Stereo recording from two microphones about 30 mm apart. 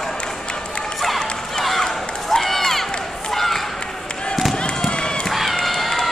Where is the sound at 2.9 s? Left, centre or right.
Left.